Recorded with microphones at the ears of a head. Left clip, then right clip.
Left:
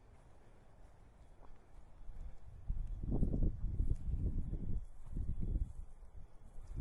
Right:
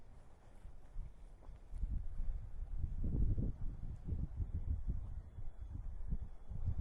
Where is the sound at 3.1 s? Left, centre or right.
Left.